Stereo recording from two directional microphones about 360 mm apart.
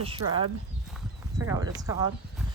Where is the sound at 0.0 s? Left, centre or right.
Centre.